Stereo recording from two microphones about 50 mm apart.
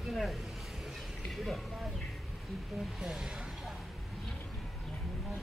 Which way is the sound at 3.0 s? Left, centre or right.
Centre.